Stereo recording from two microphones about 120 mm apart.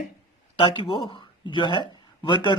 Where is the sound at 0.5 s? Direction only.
45° left (ahead or behind).